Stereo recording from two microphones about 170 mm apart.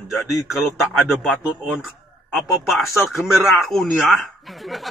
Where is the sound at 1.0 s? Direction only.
5° right (ahead or behind).